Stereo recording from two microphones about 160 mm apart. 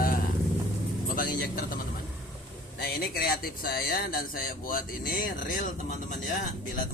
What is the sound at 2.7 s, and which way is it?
A man's voice, 75° left (ahead or behind).